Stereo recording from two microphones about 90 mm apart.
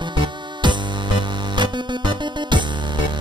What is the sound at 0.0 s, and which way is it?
Music, 60° right (ahead or behind).